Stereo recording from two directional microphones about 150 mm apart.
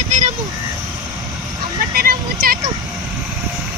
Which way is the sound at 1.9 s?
85° right.